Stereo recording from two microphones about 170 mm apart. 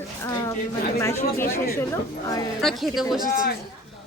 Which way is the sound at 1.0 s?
15° left (ahead or behind).